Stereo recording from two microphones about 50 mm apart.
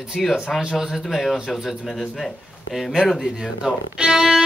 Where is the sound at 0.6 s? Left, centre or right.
Centre.